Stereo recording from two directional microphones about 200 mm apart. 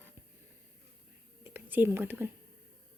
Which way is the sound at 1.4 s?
10° right (ahead or behind).